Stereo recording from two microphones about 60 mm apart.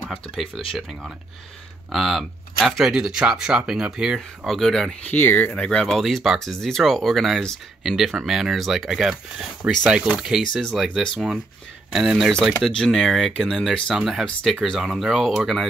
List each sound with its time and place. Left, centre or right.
1.9 s speech: centre
4.5 s speech: centre
5.0 s speech: left
5.5 s speech: centre
5.9 s speech: centre
10.5 s speech: centre
10.8 s speech: centre